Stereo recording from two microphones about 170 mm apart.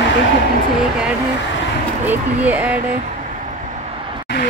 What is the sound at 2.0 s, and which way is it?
Speech, 10° right (ahead or behind).